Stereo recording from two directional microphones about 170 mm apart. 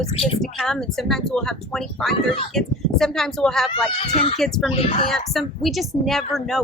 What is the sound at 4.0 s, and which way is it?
Speech, 40° left (ahead or behind).